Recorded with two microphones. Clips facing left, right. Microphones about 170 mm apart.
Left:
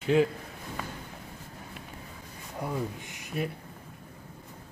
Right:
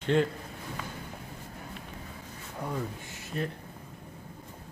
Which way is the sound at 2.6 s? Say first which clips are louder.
Left 2 dB; 15° left (ahead or behind).